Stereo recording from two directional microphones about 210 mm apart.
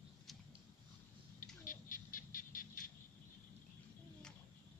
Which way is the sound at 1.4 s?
40° left (ahead or behind).